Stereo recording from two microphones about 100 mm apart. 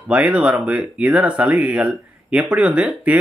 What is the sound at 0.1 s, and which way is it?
Speech, 10° right (ahead or behind).